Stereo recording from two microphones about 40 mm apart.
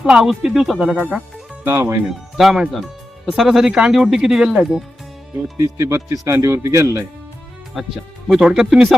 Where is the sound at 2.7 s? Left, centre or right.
Centre.